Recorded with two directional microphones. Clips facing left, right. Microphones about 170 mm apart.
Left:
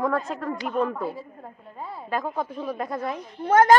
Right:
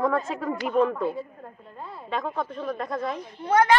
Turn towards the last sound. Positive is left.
turn(degrees=45)  # may be behind; listen again after turning